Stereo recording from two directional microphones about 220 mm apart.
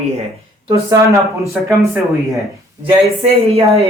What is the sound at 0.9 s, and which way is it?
Speech, 15° right (ahead or behind).